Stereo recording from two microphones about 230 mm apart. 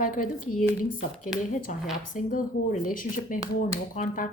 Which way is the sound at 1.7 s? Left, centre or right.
Left.